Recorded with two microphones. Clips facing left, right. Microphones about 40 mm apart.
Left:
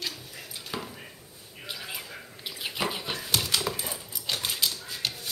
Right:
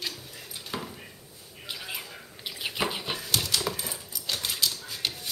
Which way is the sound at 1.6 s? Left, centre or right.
Centre.